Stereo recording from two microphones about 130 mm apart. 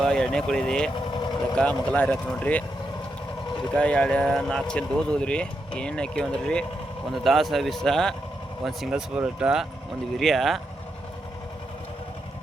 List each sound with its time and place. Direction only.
0.0 s speech: 5° left (ahead or behind)
0.9 s vehicle: 35° left (ahead or behind)
1.5 s speech: 10° left (ahead or behind)
3.8 s speech: 10° left (ahead or behind)